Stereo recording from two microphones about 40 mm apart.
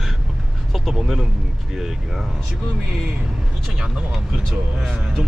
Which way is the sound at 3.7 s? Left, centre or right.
Centre.